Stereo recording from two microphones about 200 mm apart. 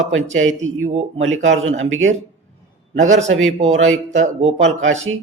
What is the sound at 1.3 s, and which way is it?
Speech, 75° right (ahead or behind).